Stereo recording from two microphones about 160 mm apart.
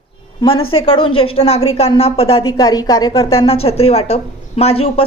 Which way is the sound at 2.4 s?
25° left (ahead or behind).